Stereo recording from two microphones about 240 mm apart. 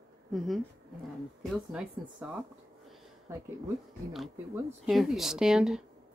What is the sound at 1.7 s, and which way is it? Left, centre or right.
Speech, centre.